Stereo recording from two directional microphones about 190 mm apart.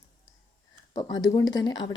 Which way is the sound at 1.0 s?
20° left (ahead or behind).